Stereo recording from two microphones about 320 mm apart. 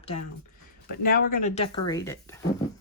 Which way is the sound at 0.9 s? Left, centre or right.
Left.